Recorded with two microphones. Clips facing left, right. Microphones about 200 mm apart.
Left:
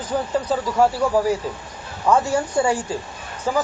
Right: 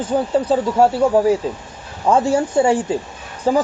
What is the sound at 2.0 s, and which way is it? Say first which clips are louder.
Speech: right 3 dB; 25° right (ahead or behind).